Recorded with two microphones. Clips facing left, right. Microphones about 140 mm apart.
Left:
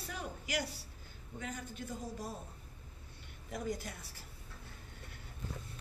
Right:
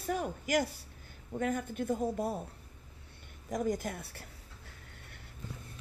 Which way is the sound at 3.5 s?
45° right (ahead or behind).